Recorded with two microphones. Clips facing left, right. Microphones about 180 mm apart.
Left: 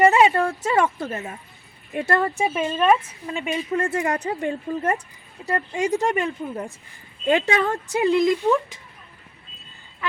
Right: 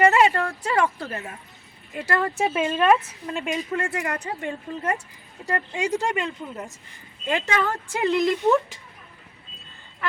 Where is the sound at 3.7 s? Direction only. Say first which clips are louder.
Left 4 dB; 30° left (ahead or behind).